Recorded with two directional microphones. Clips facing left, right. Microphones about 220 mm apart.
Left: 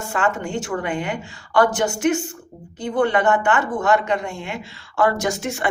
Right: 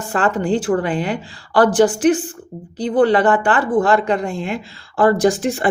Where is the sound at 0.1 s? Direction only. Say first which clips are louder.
Right 6 dB; 35° right (ahead or behind).